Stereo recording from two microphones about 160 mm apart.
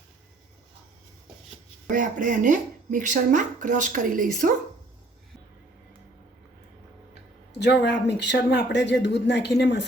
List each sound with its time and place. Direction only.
1.9 s speech: 55° right (ahead or behind)
7.6 s speech: 90° left